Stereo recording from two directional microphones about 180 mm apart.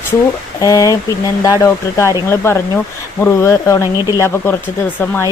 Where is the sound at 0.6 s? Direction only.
20° left (ahead or behind).